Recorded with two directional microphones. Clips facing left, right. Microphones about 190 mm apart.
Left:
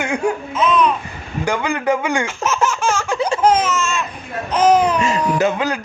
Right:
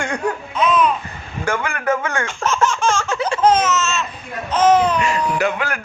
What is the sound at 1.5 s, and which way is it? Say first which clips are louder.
Speech: left 2 dB; 15° left (ahead or behind).